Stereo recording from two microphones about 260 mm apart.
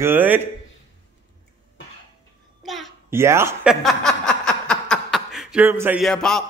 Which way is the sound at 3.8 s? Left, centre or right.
Centre.